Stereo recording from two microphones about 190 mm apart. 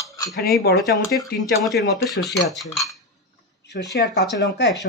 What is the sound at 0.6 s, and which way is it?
Speech, 55° left (ahead or behind).